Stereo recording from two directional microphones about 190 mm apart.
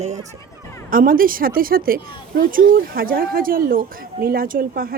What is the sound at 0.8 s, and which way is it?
A woman's voice, 50° right (ahead or behind).